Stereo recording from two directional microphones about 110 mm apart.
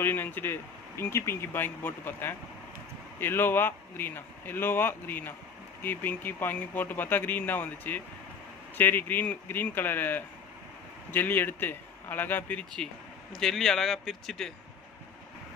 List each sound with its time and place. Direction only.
0.0 s a man's voice: 20° left (ahead or behind); by 14.5 s 5° left (ahead or behind)